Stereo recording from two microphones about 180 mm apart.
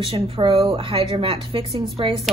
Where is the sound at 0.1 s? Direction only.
30° right (ahead or behind).